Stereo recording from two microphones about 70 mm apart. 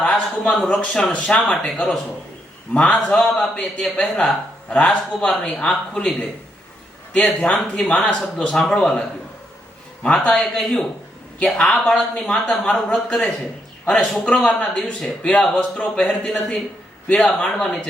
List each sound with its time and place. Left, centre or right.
0.0 s speech: centre
7.3 s speech: centre